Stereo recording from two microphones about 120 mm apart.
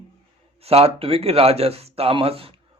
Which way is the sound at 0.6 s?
55° right (ahead or behind).